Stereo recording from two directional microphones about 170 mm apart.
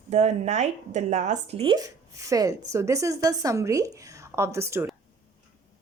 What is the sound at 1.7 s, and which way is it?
A woman's voice, 20° right (ahead or behind).